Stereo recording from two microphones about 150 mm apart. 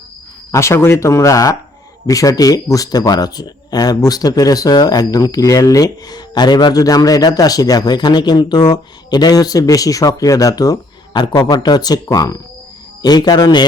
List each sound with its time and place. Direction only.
0.5 s speech: 20° left (ahead or behind)